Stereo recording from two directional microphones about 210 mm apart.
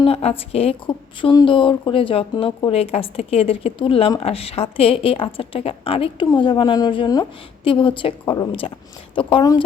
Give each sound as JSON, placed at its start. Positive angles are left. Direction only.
{"t": 0.0, "sound": "speech", "side_deg": 30}